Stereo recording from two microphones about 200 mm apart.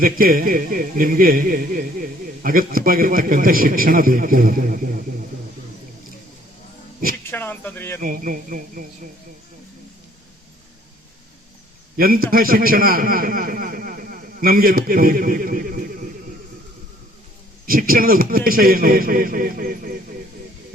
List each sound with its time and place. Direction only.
0.0 s a man's voice: 45° right (ahead or behind)
7.3 s speech: 10° left (ahead or behind)
8.0 s a man's voice: 45° right (ahead or behind)
11.9 s a man's voice: 45° right (ahead or behind)
17.7 s a man's voice: 45° right (ahead or behind)